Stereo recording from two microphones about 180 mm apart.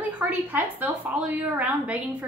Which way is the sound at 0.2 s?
10° right (ahead or behind).